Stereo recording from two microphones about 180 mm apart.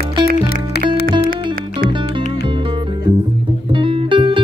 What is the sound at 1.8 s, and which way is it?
Music, 25° right (ahead or behind).